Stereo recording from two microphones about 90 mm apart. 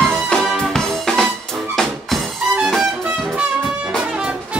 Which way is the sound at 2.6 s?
Centre (ahead or behind).